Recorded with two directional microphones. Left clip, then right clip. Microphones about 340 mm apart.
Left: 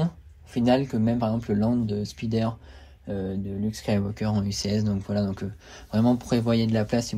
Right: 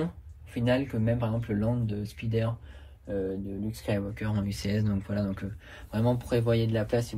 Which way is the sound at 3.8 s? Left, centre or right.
Centre.